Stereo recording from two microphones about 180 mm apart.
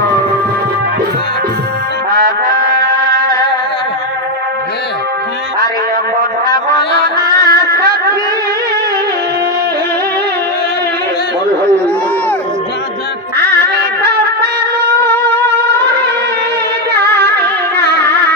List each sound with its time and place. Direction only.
2.1 s music: 55° right (ahead or behind)
7.2 s music: 60° right (ahead or behind)
14.0 s music: 60° right (ahead or behind)